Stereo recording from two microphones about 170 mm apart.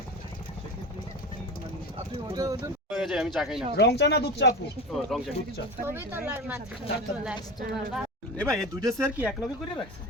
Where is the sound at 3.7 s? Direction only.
80° left.